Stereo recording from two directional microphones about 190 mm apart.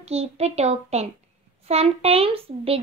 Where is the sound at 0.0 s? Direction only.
35° right (ahead or behind).